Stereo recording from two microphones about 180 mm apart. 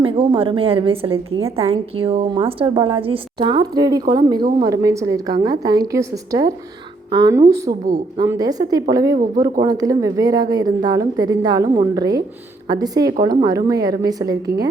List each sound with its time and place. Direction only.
0.0 s a woman's voice: 30° right (ahead or behind)